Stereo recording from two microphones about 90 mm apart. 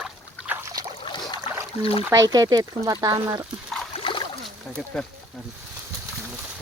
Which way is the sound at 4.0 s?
75° left (ahead or behind).